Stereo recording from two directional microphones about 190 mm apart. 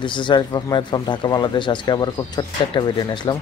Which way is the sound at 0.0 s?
25° left (ahead or behind).